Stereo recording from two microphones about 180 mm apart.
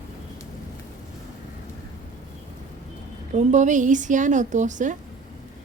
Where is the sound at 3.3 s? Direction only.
40° right (ahead or behind).